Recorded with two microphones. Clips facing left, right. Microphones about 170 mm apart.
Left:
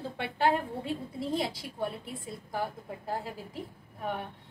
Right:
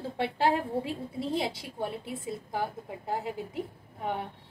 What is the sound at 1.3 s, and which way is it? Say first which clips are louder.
A woman's voice: even; 25° right (ahead or behind).